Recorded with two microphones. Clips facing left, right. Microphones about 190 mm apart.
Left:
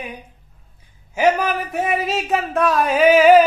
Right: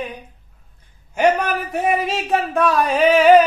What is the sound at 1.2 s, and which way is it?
A man's voice, centre (ahead or behind).